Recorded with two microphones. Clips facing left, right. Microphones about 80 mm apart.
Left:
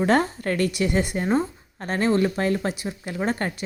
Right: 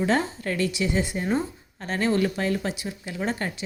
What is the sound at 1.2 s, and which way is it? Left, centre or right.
Speech, left.